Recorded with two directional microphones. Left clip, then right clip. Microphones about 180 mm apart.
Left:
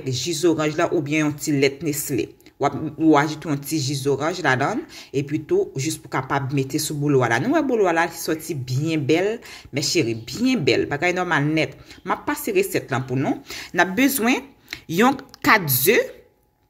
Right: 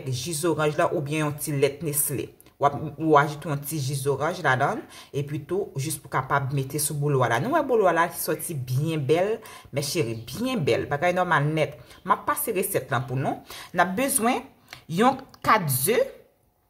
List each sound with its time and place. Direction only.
0.0 s speech: 10° left (ahead or behind)